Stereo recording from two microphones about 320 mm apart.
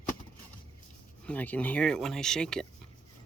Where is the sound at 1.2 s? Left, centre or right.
Centre.